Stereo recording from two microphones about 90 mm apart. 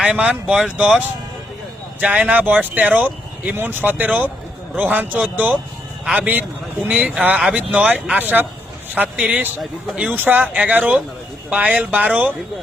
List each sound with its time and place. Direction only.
0.0 s speech: 10° right (ahead or behind)